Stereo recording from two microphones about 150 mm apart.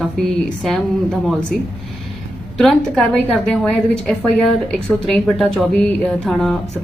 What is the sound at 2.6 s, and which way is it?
A woman's voice, centre (ahead or behind).